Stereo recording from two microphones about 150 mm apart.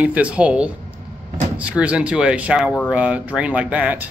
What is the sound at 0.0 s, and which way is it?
Speech, 10° right (ahead or behind).